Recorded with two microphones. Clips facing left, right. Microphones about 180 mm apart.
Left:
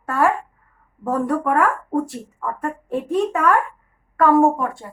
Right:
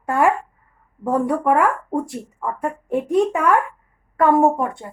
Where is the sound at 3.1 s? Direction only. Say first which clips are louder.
Right 1 dB; 15° right (ahead or behind).